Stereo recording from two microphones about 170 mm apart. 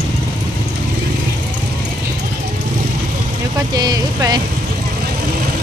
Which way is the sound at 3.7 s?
25° right (ahead or behind).